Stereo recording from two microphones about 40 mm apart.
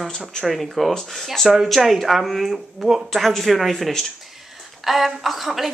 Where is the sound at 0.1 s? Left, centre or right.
Centre.